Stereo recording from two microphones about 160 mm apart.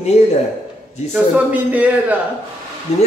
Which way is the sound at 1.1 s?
10° right (ahead or behind).